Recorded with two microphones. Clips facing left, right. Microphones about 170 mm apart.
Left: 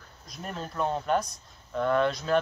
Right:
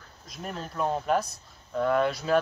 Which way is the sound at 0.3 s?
5° right (ahead or behind).